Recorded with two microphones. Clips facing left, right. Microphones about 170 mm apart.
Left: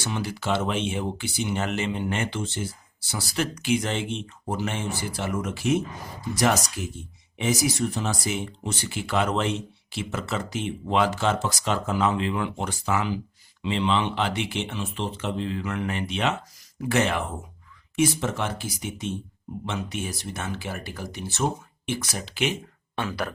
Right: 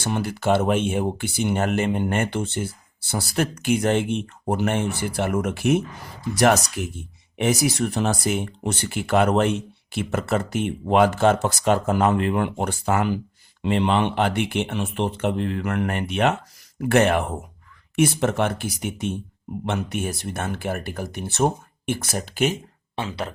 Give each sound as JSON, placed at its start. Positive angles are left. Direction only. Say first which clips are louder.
{"t": 0.0, "sound": "speech", "louder": "right 5 dB", "side_deg": -55}
{"t": 23.0, "sound": "speech", "louder": "right 1 dB", "side_deg": -25}